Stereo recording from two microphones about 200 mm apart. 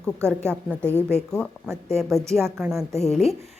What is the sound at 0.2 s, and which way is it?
A woman's voice, 10° right (ahead or behind).